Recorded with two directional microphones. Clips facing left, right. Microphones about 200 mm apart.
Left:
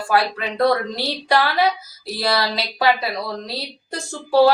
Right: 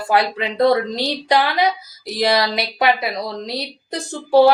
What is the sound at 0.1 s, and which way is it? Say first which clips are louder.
A woman's voice: right 2 dB; 20° right (ahead or behind).